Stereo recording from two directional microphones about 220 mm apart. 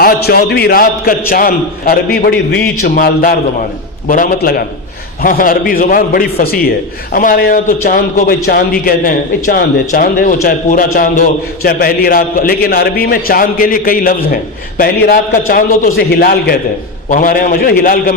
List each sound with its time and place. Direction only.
0.0 s a man's voice: 45° left (ahead or behind)